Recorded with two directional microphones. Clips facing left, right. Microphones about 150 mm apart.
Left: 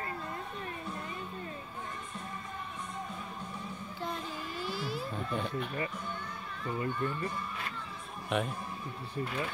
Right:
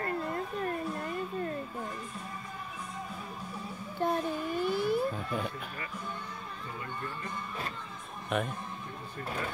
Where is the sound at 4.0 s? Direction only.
55° right (ahead or behind).